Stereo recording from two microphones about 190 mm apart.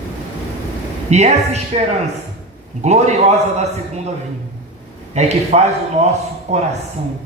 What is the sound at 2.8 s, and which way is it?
Speech, 35° right (ahead or behind).